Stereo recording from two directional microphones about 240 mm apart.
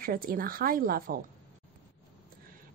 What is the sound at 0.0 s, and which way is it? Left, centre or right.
Speech, right.